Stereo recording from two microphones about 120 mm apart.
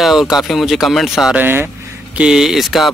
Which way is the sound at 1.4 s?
15° right (ahead or behind).